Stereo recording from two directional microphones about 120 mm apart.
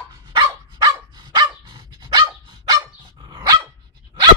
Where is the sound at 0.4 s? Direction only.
35° right (ahead or behind).